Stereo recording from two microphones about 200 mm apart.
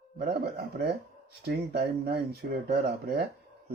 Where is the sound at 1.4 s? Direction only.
50° right (ahead or behind).